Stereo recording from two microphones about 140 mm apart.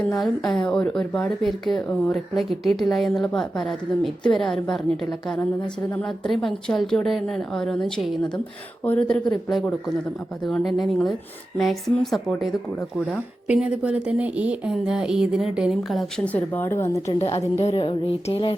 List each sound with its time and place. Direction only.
0.0 s a woman's voice: 5° left (ahead or behind)
13.5 s a woman's voice: 5° right (ahead or behind); by 17.0 s 15° left (ahead or behind)
17.2 s a woman's voice: 45° left (ahead or behind)